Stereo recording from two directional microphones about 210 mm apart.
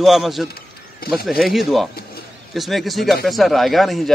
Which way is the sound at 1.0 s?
45° left (ahead or behind).